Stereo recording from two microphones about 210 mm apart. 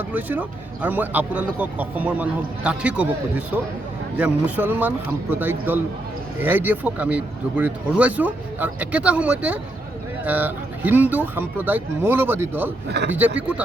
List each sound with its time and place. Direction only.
0.1 s speech: 10° right (ahead or behind)
12.9 s speech: 55° right (ahead or behind)